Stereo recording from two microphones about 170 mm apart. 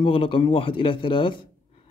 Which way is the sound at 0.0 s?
30° left (ahead or behind).